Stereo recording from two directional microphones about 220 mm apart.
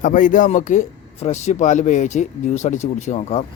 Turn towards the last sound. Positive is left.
turn(degrees=30)  # may be behind; listen again after turning